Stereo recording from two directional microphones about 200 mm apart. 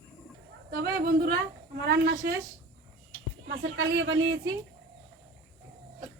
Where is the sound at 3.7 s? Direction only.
65° right (ahead or behind).